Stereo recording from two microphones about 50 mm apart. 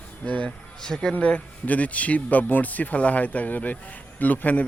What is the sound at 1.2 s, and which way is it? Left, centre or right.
A man's voice, left.